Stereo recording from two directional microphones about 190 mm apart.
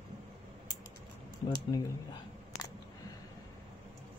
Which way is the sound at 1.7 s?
20° left (ahead or behind).